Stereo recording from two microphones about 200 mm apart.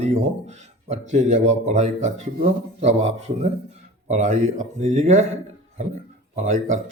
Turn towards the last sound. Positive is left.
turn(degrees=-35)  # may be behind; listen again after turning